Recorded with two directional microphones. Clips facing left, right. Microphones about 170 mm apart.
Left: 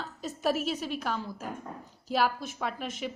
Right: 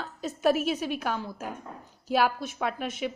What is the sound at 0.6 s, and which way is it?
Speech, 60° right (ahead or behind).